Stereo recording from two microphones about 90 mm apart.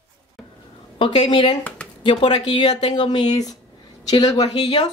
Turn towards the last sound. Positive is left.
turn(degrees=50)  # may be behind; listen again after turning